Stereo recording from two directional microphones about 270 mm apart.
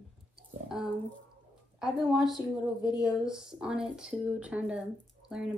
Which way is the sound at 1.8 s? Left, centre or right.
Centre.